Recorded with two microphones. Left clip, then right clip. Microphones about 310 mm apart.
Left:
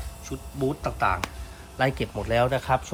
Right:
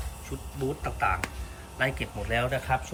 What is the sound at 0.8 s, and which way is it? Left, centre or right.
Speech, centre.